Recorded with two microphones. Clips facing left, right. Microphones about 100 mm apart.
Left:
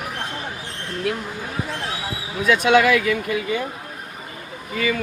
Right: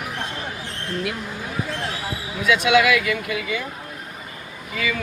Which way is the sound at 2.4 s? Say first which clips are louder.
Left 1 dB; 40° left (ahead or behind).